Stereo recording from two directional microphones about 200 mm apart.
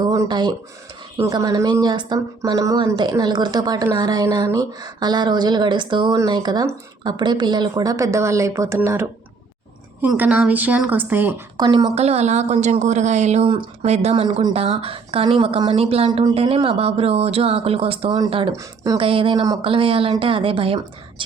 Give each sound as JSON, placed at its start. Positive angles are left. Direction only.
{"t": 0.0, "sound": "a sound", "side_deg": -20}
{"t": 1.1, "sound": "a woman's voice", "side_deg": -15}
{"t": 11.9, "sound": "a woman's voice", "side_deg": -30}